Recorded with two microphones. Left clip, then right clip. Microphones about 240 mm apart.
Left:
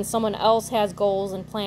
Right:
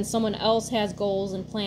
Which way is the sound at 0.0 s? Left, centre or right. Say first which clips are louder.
Left 4 dB; left.